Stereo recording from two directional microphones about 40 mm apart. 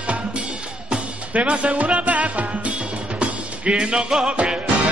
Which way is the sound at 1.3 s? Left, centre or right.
Right.